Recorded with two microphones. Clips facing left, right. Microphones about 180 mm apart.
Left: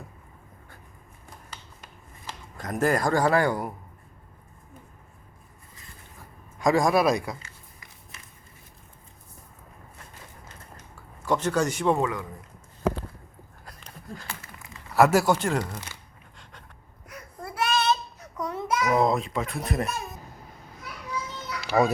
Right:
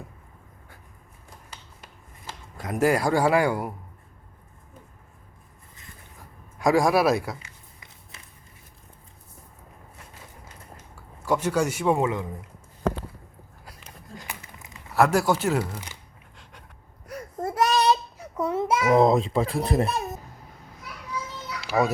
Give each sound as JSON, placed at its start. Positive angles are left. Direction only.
{"t": 2.6, "sound": "a man's voice", "side_deg": -10}
{"t": 6.6, "sound": "a man's voice", "side_deg": -5}
{"t": 7.3, "sound": "a sound", "side_deg": -20}
{"t": 11.3, "sound": "a man's voice", "side_deg": -10}
{"t": 12.0, "sound": "speech", "side_deg": -25}
{"t": 13.7, "sound": "a sound", "side_deg": -5}
{"t": 14.2, "sound": "a sound", "side_deg": -15}
{"t": 14.9, "sound": "speech", "side_deg": 0}
{"t": 16.4, "sound": "a sound", "side_deg": -10}
{"t": 17.1, "sound": "child singing", "side_deg": -40}
{"t": 18.3, "sound": "a child's voice", "side_deg": -25}
{"t": 21.7, "sound": "speech", "side_deg": 0}